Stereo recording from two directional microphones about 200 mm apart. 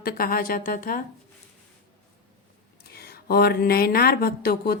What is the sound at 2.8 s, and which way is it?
Speech, 50° left (ahead or behind).